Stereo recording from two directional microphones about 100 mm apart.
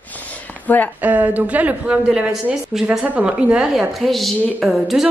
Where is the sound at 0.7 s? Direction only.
20° left (ahead or behind).